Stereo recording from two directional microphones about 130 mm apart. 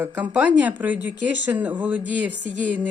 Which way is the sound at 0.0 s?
10° right (ahead or behind).